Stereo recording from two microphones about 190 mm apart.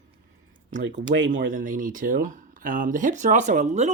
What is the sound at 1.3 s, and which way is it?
Speech, 45° right (ahead or behind).